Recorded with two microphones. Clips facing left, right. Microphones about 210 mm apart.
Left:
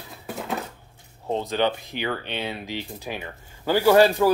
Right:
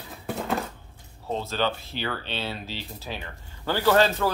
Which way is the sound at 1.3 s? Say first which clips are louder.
Left 4 dB; 15° left (ahead or behind).